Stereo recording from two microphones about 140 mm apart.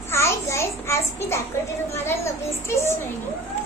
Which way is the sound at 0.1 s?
20° left (ahead or behind).